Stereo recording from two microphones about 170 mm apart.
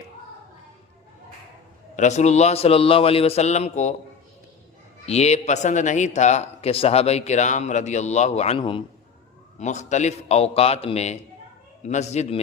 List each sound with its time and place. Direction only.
2.0 s a man's voice: 40° left (ahead or behind)
5.0 s speech: 40° left (ahead or behind)
9.6 s a man's voice: 45° left (ahead or behind)